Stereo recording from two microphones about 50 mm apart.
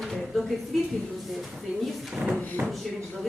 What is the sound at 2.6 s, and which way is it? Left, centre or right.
Speech, right.